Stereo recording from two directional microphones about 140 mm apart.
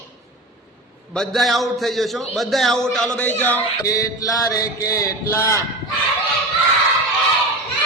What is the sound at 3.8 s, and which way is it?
Mantra, 25° left (ahead or behind).